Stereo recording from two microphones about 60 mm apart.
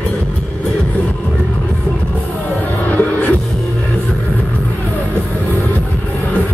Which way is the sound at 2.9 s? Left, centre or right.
Left.